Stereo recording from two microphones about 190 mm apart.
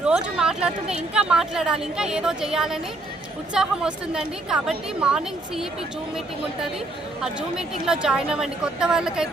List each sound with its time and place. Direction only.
0.0 s a woman's voice: 5° right (ahead or behind)
7.2 s a woman's voice: 5° right (ahead or behind)